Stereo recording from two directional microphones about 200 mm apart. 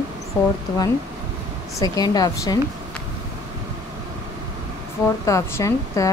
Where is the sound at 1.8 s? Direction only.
20° left (ahead or behind).